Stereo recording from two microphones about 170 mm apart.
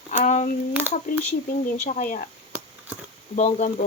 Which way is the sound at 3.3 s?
45° left (ahead or behind).